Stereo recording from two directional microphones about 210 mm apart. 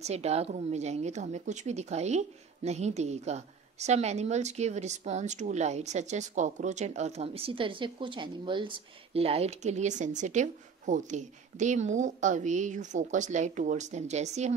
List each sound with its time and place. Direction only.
0.0 s a woman's voice: 30° right (ahead or behind)